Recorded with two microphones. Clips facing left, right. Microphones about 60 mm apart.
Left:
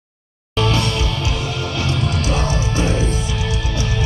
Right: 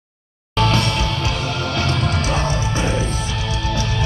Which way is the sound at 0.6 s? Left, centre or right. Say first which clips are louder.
Right 1 dB; right.